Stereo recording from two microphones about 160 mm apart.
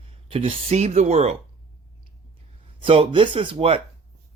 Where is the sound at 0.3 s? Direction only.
35° right (ahead or behind).